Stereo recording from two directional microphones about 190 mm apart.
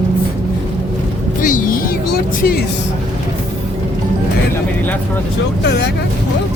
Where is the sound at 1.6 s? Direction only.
50° left (ahead or behind).